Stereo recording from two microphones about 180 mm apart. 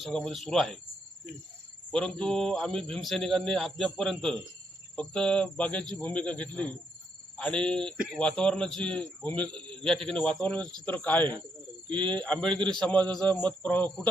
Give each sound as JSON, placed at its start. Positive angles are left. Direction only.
{"t": 0.0, "sound": "speech", "side_deg": 5}
{"t": 1.9, "sound": "speech", "side_deg": 5}